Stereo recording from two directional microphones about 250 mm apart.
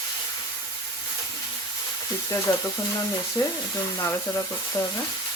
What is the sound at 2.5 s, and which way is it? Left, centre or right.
Speech, centre.